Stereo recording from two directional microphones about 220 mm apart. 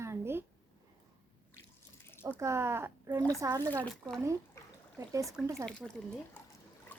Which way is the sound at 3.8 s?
5° left (ahead or behind).